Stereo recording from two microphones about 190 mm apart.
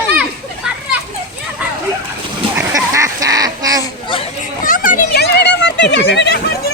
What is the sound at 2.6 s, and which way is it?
Goose, 15° right (ahead or behind).